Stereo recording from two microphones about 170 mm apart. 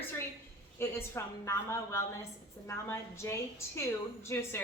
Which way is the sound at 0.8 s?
15° left (ahead or behind).